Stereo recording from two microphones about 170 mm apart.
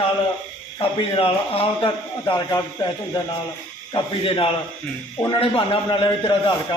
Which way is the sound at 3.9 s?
30° left (ahead or behind).